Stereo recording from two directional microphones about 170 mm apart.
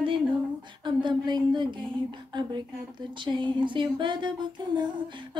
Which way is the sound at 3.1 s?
30° right (ahead or behind).